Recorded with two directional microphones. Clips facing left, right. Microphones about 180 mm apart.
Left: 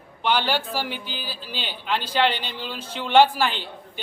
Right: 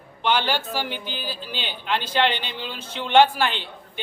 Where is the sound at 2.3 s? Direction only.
40° left (ahead or behind).